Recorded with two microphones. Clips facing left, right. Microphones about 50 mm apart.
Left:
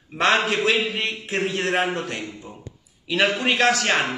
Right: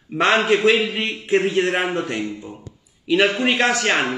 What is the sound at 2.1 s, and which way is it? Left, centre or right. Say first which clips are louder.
Speech: right 6 dB; centre.